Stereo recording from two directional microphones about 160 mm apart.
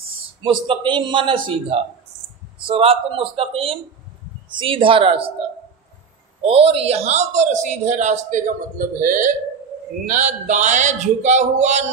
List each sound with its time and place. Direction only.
0.4 s a man's voice: 30° right (ahead or behind)
6.4 s a man's voice: 35° right (ahead or behind)